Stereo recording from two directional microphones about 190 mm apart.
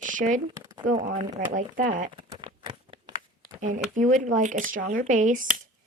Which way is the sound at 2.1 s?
25° right (ahead or behind).